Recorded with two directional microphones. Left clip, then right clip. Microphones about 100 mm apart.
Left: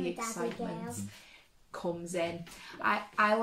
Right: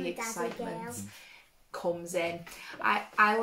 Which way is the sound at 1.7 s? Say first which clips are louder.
Right 4 dB; 20° right (ahead or behind).